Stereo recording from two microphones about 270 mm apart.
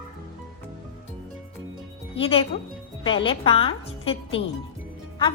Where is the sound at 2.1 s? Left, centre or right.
Left.